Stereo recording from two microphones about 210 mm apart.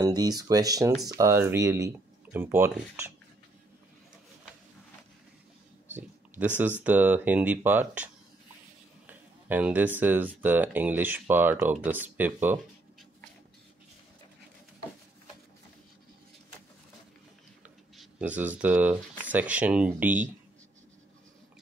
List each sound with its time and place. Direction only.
0.0 s speech: 20° right (ahead or behind)
6.3 s speech: 10° right (ahead or behind)
17.9 s speech: 5° right (ahead or behind)